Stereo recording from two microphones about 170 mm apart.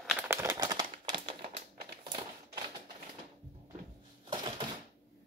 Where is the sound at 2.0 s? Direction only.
25° right (ahead or behind).